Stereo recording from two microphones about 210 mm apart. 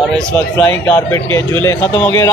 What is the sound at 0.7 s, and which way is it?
Speech, 10° left (ahead or behind).